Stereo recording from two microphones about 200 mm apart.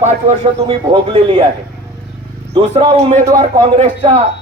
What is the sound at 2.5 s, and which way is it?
A man's voice, 25° right (ahead or behind).